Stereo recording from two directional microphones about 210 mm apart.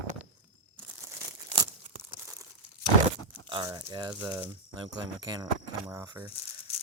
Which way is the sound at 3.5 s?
20° right (ahead or behind).